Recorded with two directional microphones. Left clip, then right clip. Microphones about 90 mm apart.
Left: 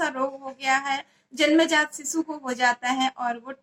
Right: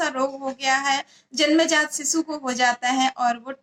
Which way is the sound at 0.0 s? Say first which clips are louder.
Right 3 dB; 25° right (ahead or behind).